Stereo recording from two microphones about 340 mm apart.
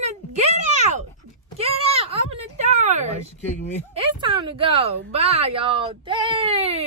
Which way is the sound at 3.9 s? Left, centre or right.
Centre.